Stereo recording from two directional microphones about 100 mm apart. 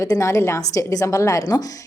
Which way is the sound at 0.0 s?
30° left (ahead or behind).